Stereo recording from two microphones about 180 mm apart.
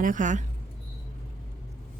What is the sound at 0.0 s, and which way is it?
Speech, 45° right (ahead or behind).